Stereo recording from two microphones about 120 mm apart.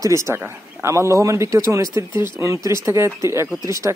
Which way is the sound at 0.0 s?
25° right (ahead or behind).